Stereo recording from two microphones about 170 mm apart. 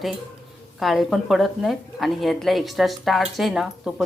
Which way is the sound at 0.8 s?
Centre (ahead or behind).